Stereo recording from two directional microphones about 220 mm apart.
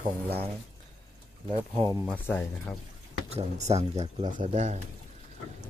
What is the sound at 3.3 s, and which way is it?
Speech, 30° right (ahead or behind).